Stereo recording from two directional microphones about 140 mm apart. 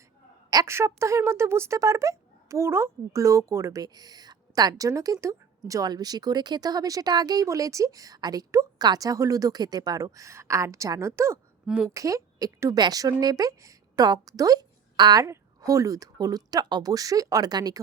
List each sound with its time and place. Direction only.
0.5 s speech: 20° right (ahead or behind)
11.6 s a woman's voice: 5° right (ahead or behind)
11.9 s a woman's voice: 25° right (ahead or behind)